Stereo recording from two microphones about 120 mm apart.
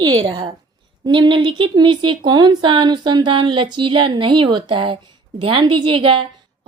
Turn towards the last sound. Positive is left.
turn(degrees=-45)  # may be behind; listen again after turning